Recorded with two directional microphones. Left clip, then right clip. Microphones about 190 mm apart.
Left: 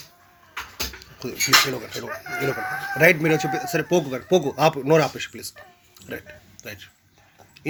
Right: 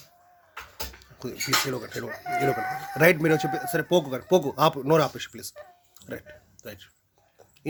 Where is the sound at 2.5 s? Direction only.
20° right (ahead or behind).